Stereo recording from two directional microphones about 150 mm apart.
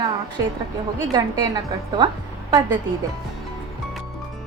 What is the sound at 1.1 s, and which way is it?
Speech, 30° right (ahead or behind).